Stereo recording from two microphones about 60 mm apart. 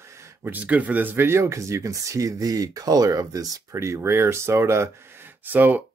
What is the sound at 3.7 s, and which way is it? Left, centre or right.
Speech, right.